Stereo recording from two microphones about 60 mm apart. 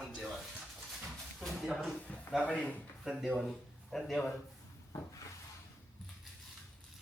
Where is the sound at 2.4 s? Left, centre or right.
Centre.